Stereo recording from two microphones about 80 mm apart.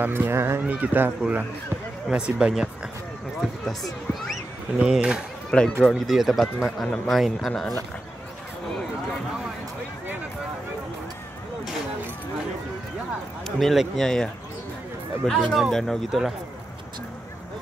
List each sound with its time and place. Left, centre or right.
0.0 s speech: right
2.0 s speech: centre
4.7 s speech: centre
5.5 s speech: centre
13.6 s speech: centre